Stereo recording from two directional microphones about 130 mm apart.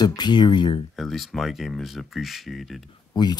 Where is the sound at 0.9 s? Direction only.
Centre (ahead or behind).